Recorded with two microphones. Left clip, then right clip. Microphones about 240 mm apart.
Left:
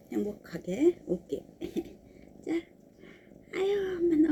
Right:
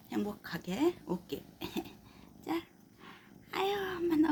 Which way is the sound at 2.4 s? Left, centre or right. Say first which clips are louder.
Left 4 dB; centre.